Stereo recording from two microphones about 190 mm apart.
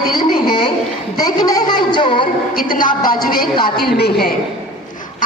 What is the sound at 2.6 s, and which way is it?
A woman's voice, 45° left (ahead or behind).